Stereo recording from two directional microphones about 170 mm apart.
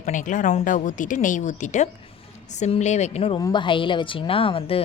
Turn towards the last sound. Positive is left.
turn(degrees=35)  # may be behind; listen again after turning